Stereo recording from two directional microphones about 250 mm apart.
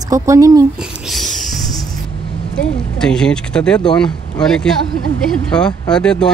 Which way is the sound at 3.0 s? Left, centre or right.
Centre.